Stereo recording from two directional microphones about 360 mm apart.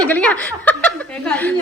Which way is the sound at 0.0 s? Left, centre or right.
Centre.